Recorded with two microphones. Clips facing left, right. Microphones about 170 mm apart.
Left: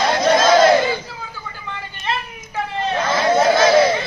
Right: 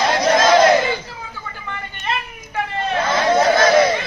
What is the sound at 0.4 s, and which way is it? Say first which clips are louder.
Battle cry: even; centre (ahead or behind).